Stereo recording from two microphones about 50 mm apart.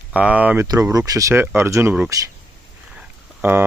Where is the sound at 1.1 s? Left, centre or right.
Right.